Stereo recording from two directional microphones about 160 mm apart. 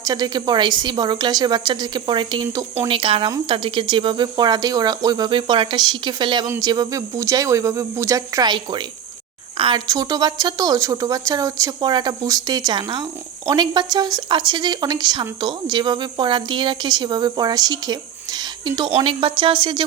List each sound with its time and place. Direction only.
0.0 s speech: 25° right (ahead or behind)